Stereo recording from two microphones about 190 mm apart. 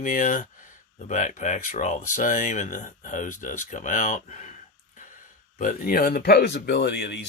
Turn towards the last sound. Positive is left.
turn(degrees=65)  # may be behind; listen again after turning